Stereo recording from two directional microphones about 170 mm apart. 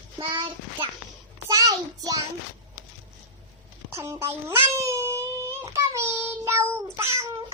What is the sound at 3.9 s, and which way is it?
Speech, 15° right (ahead or behind).